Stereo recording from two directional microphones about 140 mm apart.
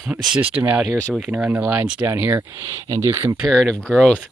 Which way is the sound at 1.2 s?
5° right (ahead or behind).